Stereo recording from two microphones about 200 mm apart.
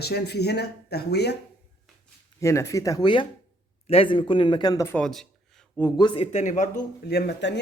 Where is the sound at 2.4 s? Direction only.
15° left (ahead or behind).